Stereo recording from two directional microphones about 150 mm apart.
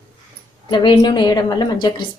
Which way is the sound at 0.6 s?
30° left (ahead or behind).